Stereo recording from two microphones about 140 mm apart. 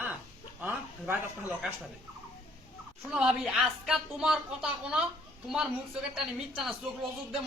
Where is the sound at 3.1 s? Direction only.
5° right (ahead or behind).